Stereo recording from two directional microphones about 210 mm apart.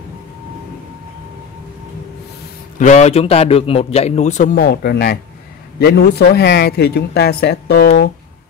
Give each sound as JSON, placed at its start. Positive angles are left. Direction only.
{"t": 2.8, "sound": "a man's voice", "side_deg": 35}